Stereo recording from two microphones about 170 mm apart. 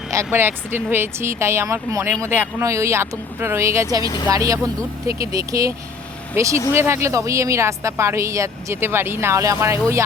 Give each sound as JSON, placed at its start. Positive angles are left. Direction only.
{"t": 0.1, "sound": "speech", "side_deg": -15}
{"t": 4.0, "sound": "speech", "side_deg": 25}
{"t": 4.3, "sound": "speech", "side_deg": -20}